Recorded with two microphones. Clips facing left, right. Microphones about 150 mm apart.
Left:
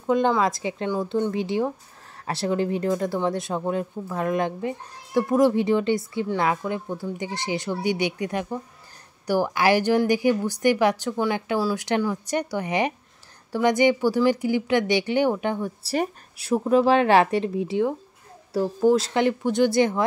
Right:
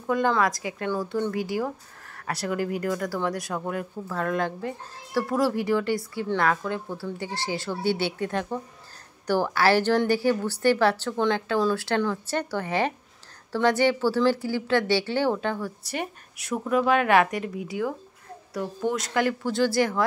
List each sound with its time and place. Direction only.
0.0 s a woman's voice: 20° left (ahead or behind)
15.8 s a woman's voice: 30° left (ahead or behind)